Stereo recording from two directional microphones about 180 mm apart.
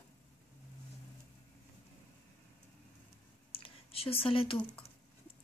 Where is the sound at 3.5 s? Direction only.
30° left (ahead or behind).